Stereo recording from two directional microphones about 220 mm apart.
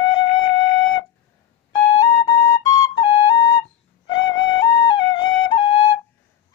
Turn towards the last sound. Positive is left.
turn(degrees=20)  # may be behind; listen again after turning